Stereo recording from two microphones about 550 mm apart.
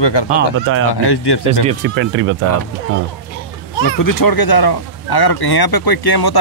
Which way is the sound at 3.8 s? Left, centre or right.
Left.